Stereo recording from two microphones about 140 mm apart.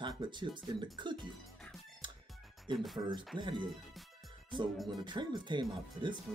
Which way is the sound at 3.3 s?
35° right (ahead or behind).